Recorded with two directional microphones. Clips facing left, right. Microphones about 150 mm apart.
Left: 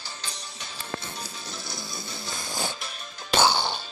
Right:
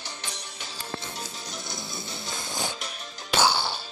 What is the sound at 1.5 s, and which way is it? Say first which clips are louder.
Music: even; 20° right (ahead or behind).